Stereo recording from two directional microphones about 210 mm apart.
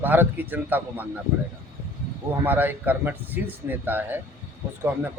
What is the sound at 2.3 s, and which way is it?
Speech, 10° right (ahead or behind).